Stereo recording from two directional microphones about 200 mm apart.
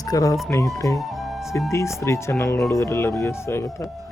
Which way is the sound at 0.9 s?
Centre (ahead or behind).